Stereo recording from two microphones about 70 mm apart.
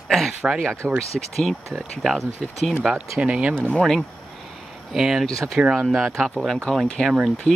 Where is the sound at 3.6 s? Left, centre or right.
Centre.